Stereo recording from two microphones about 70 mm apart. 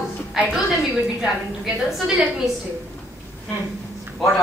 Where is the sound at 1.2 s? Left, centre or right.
Centre.